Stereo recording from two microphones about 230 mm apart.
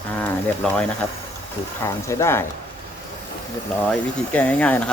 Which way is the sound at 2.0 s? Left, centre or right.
Centre.